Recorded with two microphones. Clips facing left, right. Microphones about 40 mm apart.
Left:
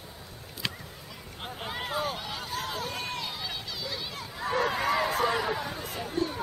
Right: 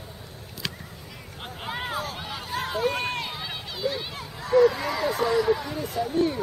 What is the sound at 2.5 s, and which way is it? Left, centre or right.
Run, centre.